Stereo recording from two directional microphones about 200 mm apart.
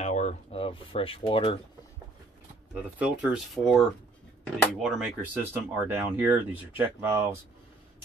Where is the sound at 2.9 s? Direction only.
5° right (ahead or behind).